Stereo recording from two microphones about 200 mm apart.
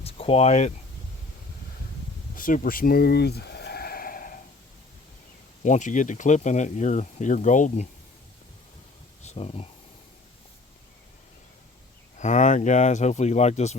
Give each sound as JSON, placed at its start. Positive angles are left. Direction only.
{"t": 0.0, "sound": "a sound", "side_deg": 30}
{"t": 2.3, "sound": "bleat", "side_deg": 45}
{"t": 5.6, "sound": "speech", "side_deg": 40}
{"t": 9.2, "sound": "speech", "side_deg": 30}
{"t": 12.1, "sound": "speech", "side_deg": 35}